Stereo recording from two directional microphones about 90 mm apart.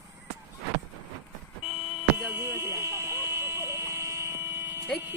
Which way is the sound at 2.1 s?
25° right (ahead or behind).